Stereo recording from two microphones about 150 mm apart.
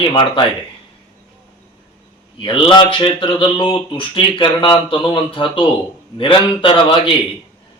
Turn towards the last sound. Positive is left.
turn(degrees=35)  # may be behind; listen again after turning